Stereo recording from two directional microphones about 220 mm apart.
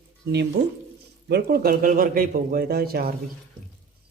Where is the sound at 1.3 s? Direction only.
45° right (ahead or behind).